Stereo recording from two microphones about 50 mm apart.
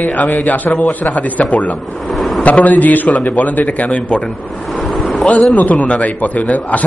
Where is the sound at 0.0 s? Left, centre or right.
Left.